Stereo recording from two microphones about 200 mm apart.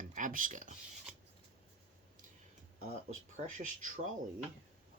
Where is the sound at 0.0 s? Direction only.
40° right (ahead or behind).